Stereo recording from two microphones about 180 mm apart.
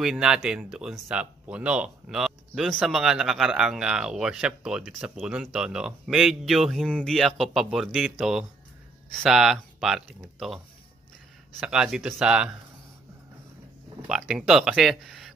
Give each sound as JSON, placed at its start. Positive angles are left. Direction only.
{"t": 0.0, "sound": "speech", "side_deg": -5}
{"t": 11.6, "sound": "speech", "side_deg": -5}
{"t": 14.0, "sound": "speech", "side_deg": -5}